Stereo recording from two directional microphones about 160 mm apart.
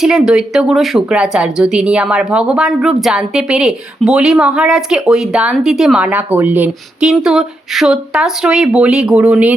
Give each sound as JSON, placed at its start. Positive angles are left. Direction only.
{"t": 0.0, "sound": "speech", "side_deg": -5}